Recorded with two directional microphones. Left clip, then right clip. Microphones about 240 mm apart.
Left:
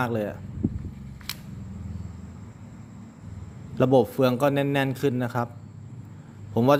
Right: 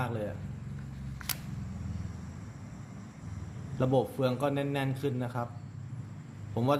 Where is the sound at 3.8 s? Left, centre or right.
Left.